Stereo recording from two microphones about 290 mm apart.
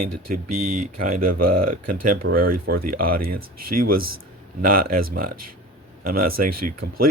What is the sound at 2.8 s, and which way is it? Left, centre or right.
A man's voice, right.